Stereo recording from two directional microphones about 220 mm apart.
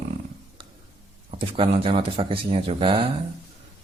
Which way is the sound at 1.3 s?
25° right (ahead or behind).